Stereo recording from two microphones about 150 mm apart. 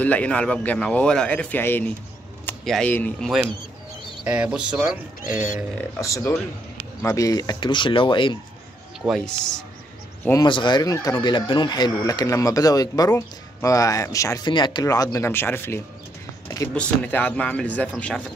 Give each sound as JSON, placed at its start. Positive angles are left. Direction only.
{"t": 0.0, "sound": "a man's voice", "side_deg": 10}
{"t": 4.3, "sound": "speech", "side_deg": -5}
{"t": 5.9, "sound": "speech", "side_deg": 20}
{"t": 9.0, "sound": "speech", "side_deg": 5}
{"t": 10.4, "sound": "a man's voice", "side_deg": 30}